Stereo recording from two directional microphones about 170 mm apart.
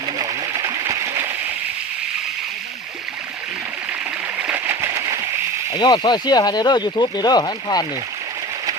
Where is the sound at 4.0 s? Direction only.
10° right (ahead or behind).